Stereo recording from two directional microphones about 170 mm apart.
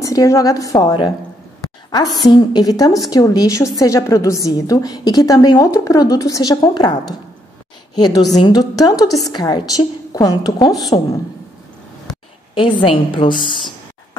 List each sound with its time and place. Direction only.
0.0 s a woman's voice: 20° left (ahead or behind)
12.5 s a woman's voice: 30° left (ahead or behind)